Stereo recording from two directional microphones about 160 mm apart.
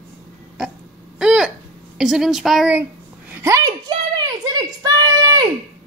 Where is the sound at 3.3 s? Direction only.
20° right (ahead or behind).